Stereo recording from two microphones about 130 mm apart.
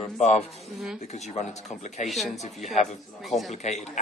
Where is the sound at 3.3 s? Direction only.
Centre (ahead or behind).